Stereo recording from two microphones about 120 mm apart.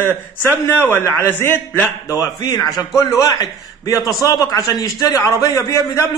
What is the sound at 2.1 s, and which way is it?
A man's voice, 30° left (ahead or behind).